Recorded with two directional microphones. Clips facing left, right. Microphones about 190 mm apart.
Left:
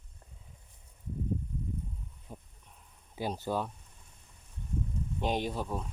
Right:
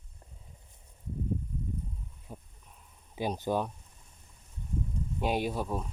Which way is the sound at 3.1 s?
15° right (ahead or behind).